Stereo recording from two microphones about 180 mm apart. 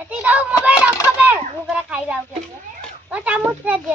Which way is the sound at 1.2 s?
5° right (ahead or behind).